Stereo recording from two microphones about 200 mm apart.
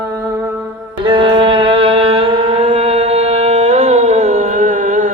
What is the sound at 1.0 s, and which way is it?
Music, 25° right (ahead or behind).